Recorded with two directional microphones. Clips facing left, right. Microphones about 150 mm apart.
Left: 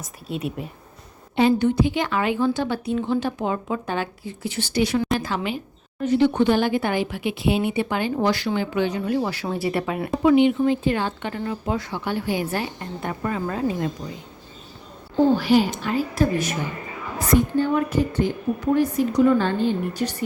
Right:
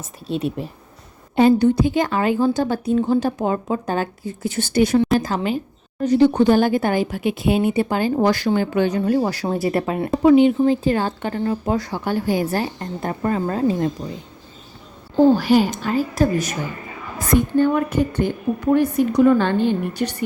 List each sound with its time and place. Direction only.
0.3 s speech: 30° right (ahead or behind)
1.4 s a woman's voice: 40° right (ahead or behind)
15.4 s speech: 45° right (ahead or behind)
17.2 s a woman's voice: 55° right (ahead or behind)